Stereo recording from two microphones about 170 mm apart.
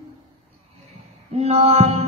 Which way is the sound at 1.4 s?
35° right (ahead or behind).